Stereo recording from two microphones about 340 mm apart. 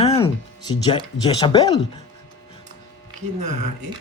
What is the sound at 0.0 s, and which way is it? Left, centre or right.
Music, centre.